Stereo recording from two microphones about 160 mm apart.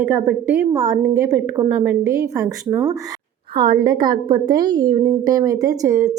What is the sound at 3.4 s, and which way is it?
A woman's voice, 30° right (ahead or behind).